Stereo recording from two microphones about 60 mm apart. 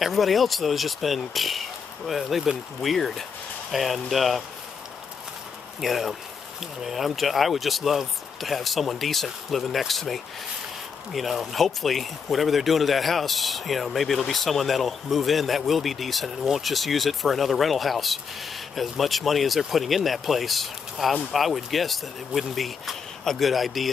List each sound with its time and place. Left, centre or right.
0.0 s speech: centre
5.8 s speech: centre